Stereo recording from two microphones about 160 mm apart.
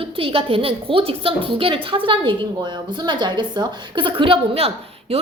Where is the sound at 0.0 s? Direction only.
35° right (ahead or behind).